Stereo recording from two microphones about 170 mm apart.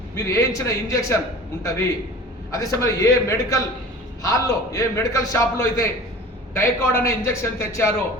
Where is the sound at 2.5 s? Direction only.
20° left (ahead or behind).